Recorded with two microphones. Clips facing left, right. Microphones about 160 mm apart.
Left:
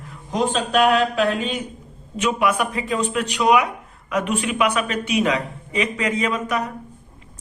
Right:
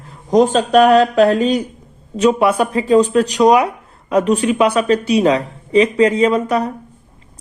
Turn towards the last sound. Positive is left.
turn(degrees=-30)  # may be behind; listen again after turning